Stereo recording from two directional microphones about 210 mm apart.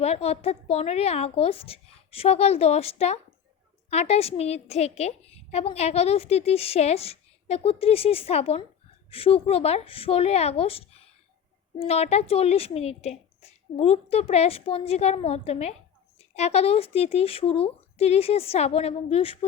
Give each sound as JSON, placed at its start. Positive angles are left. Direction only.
{"t": 0.0, "sound": "a woman's voice", "side_deg": 30}